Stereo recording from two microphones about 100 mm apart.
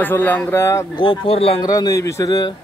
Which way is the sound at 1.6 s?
40° left (ahead or behind).